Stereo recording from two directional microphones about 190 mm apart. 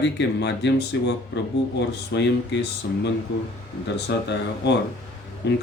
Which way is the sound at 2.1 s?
65° left (ahead or behind).